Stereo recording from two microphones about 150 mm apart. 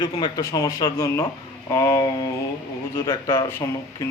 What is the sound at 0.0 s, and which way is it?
Speech, 25° left (ahead or behind).